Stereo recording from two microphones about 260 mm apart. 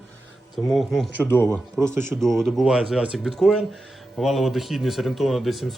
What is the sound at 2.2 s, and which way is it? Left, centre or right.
Speech, centre.